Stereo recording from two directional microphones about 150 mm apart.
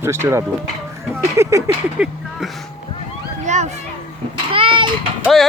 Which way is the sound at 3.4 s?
50° right (ahead or behind).